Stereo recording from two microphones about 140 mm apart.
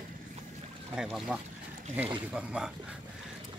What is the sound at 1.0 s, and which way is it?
Speech, 5° right (ahead or behind).